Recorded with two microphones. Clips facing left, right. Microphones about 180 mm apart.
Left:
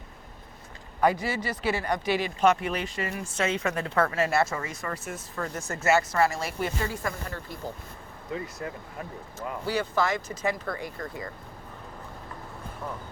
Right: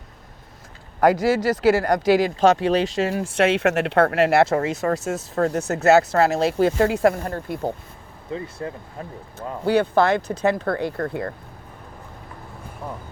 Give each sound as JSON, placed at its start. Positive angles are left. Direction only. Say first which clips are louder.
{"t": 1.0, "sound": "speech", "louder": "right 8 dB", "side_deg": -90}
{"t": 8.3, "sound": "speech", "louder": "right 4 dB", "side_deg": -30}
{"t": 9.6, "sound": "speech", "louder": "right 9 dB", "side_deg": -60}